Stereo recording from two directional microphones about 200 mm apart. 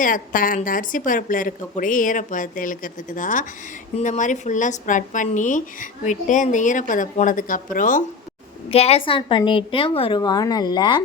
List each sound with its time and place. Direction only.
0.0 s a woman's voice: 40° left (ahead or behind)
8.7 s a woman's voice: 30° left (ahead or behind)